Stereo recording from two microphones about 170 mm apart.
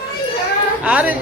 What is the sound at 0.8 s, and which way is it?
Speech, 10° right (ahead or behind).